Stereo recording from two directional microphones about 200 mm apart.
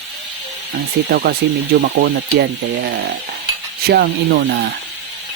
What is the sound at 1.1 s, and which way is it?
Speech, 50° right (ahead or behind).